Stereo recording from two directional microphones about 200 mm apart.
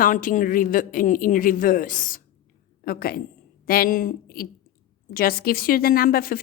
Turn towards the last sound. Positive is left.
turn(degrees=45)  # may be behind; listen again after turning